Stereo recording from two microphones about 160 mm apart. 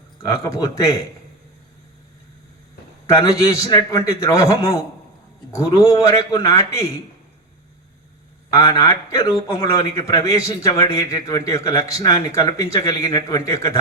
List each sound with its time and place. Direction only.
0.3 s a man's voice: 20° left (ahead or behind)
3.2 s a man's voice: 20° left (ahead or behind)
8.5 s a man's voice: 20° left (ahead or behind)